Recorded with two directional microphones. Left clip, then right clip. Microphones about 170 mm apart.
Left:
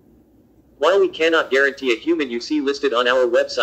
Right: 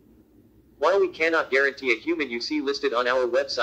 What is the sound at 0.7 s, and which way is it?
A man's voice, 20° left (ahead or behind).